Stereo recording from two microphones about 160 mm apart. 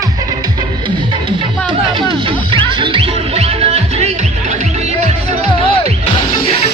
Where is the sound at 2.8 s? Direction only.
30° right (ahead or behind).